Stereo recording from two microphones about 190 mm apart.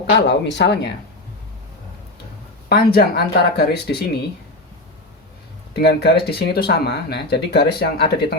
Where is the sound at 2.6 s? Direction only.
55° left (ahead or behind).